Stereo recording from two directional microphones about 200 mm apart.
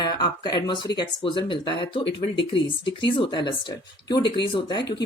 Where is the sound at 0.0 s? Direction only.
20° left (ahead or behind).